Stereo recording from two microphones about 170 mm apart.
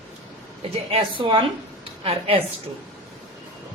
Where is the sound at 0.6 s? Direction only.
30° right (ahead or behind).